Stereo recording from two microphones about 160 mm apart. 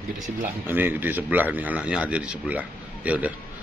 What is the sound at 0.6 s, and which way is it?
A man's voice, 10° right (ahead or behind).